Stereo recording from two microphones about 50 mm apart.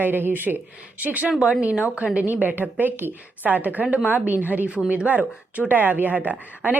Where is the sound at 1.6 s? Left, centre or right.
Right.